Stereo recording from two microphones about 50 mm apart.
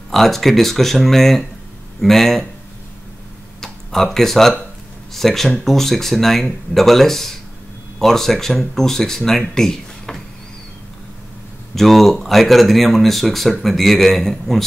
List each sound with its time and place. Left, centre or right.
0.1 s speech: centre
3.6 s speech: centre
11.7 s speech: centre